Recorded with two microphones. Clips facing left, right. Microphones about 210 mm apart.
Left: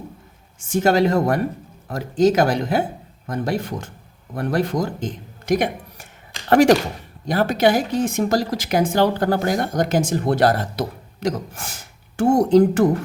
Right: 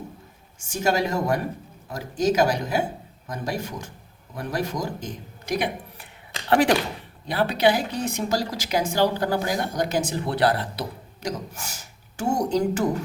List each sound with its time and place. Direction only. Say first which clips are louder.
0.6 s speech: left 7 dB; 55° left (ahead or behind)